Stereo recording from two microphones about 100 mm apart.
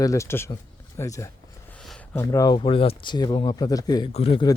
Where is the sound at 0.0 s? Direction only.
30° left (ahead or behind).